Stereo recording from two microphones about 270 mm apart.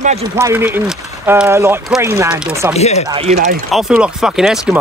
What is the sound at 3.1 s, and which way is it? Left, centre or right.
Speech, right.